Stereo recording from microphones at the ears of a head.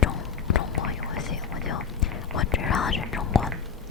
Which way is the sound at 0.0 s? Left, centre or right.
Left.